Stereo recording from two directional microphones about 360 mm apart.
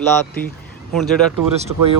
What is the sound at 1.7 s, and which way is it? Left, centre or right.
Speech, right.